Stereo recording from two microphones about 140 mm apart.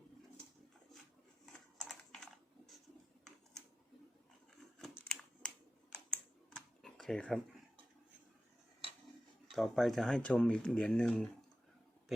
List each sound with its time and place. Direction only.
1.5 s typing: 5° left (ahead or behind)
4.9 s scissors: 5° left (ahead or behind)
5.9 s computer keyboard: 5° left (ahead or behind)
9.5 s speech: centre (ahead or behind)